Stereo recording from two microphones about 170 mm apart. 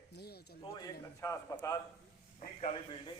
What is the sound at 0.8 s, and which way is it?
Speech, 20° left (ahead or behind).